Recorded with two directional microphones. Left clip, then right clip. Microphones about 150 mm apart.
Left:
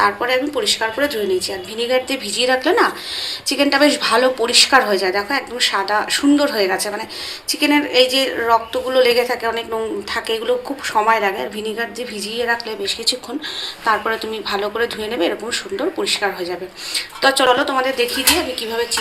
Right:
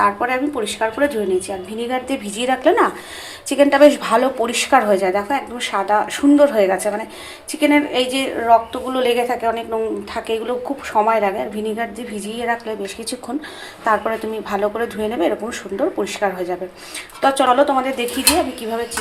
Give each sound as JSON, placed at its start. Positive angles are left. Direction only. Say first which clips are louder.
{"t": 0.0, "sound": "a woman's voice", "louder": "left 1 dB", "side_deg": -50}
{"t": 14.5, "sound": "speech", "louder": "even", "side_deg": -55}